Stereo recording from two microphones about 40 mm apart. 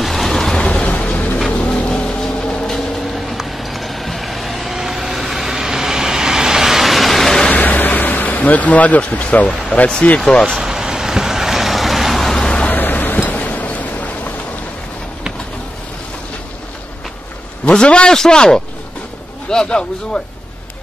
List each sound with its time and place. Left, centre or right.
0.0 s vehicle: centre
0.6 s a sound: left
1.5 s vehicle: left; by 2.8 s centre
3.2 s vehicle: centre
7.5 s a sound: left
10.0 s speech: left
10.6 s vehicle: centre
12.6 s a sound: left
17.8 s a man's voice: left